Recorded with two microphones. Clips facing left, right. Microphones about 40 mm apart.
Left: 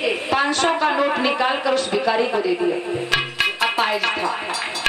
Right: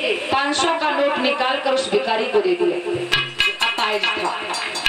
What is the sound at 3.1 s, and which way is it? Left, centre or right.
Music, centre.